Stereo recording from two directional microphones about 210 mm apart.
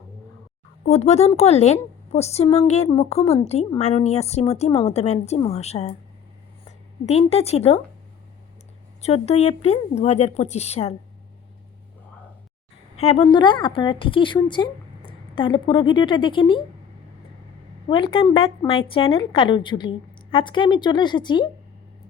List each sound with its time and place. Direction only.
0.9 s a woman's voice: 30° left (ahead or behind)
9.0 s a woman's voice: 30° left (ahead or behind)
13.0 s a woman's voice: 30° left (ahead or behind)
17.8 s a woman's voice: 25° left (ahead or behind)